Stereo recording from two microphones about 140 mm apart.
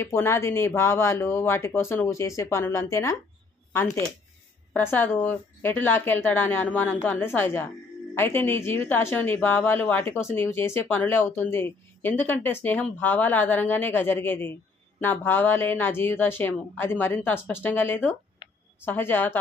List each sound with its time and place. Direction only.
0.0 s a woman's voice: 20° left (ahead or behind)